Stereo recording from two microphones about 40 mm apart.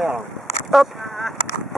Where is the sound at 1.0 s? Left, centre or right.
Centre.